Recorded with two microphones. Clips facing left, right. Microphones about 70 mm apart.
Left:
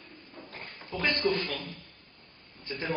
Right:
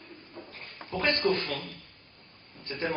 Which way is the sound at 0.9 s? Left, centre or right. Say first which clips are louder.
Right 2 dB; centre.